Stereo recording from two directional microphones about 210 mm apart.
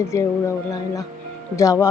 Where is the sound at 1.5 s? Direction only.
15° left (ahead or behind).